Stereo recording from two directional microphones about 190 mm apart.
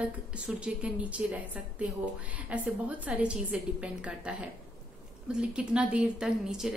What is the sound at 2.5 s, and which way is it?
A woman's voice, 10° right (ahead or behind).